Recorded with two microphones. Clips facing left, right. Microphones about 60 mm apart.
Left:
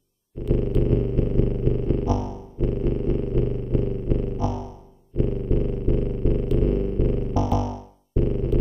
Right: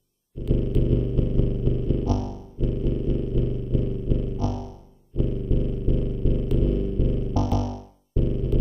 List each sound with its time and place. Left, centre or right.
0.4 s dog: left
0.8 s a sound: left
2.0 s music: left
2.6 s dog: left
4.4 s music: left
5.1 s purr: left
6.6 s a sound: left
7.5 s music: left
8.2 s music: left